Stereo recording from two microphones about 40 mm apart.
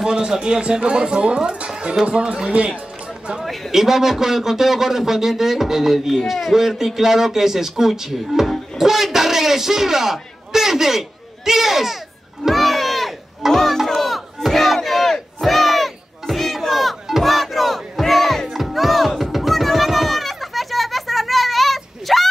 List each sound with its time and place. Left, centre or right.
0.0 s speech: centre
1.7 s music: right
2.0 s speech: right
3.7 s a man's voice: centre
12.4 s a sound: centre
13.5 s battle cry: centre
19.3 s children playing: centre